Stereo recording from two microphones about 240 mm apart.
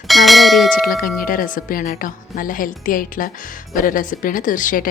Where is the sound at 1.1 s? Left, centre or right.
Left.